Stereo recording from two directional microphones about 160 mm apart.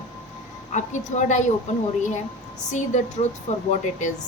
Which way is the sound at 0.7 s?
50° left (ahead or behind).